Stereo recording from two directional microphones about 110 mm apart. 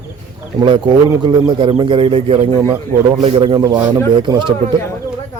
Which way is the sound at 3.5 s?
40° right (ahead or behind).